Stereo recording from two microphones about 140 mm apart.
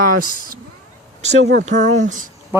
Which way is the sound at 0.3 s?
85° right.